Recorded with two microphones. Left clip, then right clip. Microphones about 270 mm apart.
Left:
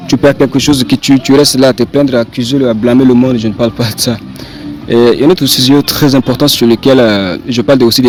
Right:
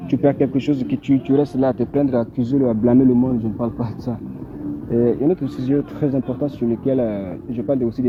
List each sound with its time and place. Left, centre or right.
0.1 s speech: left
1.3 s speech: left
2.4 s speech: left
3.4 s speech: left